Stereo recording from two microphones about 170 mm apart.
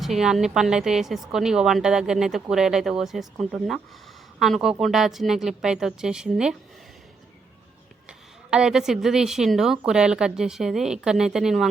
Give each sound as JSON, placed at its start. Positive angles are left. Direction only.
{"t": 0.0, "sound": "speech", "side_deg": 0}
{"t": 8.4, "sound": "speech", "side_deg": -5}